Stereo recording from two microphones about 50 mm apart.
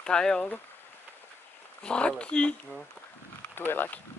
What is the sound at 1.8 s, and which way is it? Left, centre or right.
Speech, centre.